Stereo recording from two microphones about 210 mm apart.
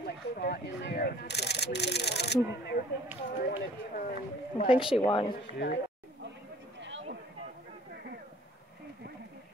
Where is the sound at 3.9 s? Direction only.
40° left (ahead or behind).